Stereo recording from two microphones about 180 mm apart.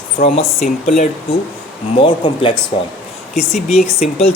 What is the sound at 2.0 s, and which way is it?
Speech, 25° left (ahead or behind).